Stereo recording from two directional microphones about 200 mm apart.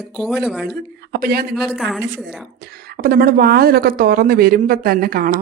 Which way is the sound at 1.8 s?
Centre (ahead or behind).